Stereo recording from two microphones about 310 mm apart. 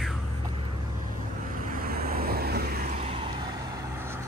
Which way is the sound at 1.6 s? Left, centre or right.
Right.